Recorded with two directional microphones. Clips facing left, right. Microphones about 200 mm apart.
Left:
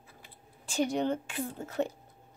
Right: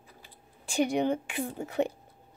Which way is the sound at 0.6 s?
15° right (ahead or behind).